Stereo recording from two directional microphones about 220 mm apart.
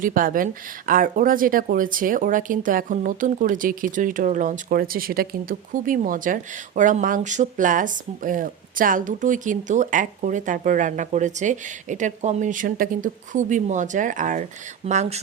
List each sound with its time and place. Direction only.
0.0 s speech: 40° right (ahead or behind)